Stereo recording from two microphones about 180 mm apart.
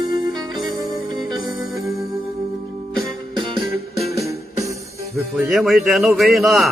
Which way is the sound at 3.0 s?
30° right (ahead or behind).